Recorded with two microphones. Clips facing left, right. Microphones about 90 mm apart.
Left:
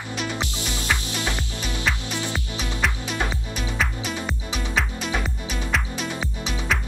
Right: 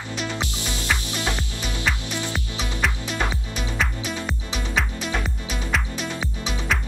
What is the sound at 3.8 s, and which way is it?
Music, centre (ahead or behind).